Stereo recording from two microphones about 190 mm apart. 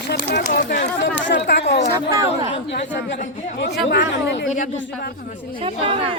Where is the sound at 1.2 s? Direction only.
65° left (ahead or behind).